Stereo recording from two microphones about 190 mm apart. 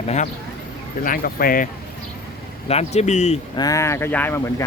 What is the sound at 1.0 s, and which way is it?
Speech, 50° left (ahead or behind).